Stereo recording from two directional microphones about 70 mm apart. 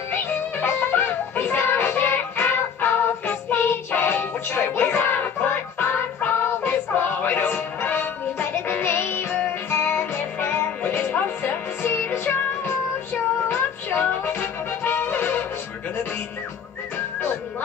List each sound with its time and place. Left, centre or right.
0.1 s music: left